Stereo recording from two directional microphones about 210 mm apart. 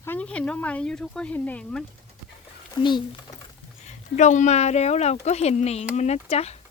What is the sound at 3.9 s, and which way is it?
Speech, 35° left (ahead or behind).